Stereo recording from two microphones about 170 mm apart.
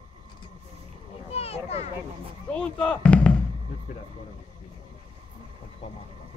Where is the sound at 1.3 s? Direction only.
35° left (ahead or behind).